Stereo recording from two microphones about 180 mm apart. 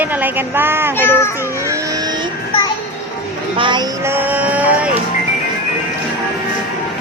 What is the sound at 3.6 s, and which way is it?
Speech, 25° right (ahead or behind).